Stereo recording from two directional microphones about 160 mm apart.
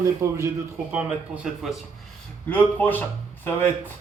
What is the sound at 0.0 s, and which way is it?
Speech, 20° right (ahead or behind).